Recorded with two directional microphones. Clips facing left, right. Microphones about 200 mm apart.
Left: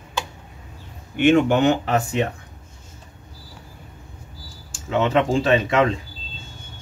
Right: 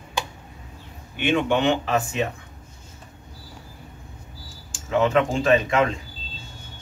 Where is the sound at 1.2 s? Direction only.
45° left (ahead or behind).